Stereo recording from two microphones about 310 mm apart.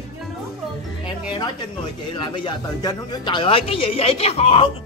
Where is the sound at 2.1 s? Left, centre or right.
Centre.